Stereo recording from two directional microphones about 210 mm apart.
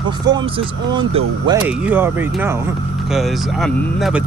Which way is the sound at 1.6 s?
10° right (ahead or behind).